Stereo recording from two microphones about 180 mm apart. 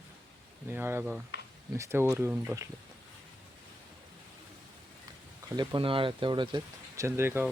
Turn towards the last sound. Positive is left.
turn(degrees=-10)  # may be behind; listen again after turning